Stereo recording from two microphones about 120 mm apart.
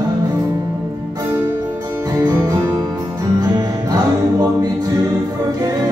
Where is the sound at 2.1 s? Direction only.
30° right (ahead or behind).